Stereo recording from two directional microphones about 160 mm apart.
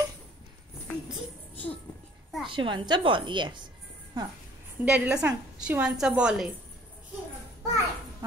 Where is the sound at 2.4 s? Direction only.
30° right (ahead or behind).